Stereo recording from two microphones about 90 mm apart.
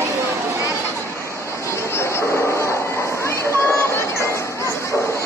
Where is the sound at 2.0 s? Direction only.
30° left (ahead or behind).